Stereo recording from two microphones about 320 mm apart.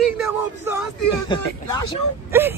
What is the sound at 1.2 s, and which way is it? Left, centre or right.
Speech, centre.